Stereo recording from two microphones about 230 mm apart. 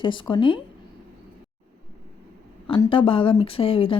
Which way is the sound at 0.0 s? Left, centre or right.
Left.